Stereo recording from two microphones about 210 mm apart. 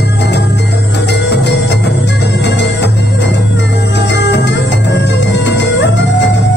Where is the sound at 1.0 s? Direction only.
55° left (ahead or behind).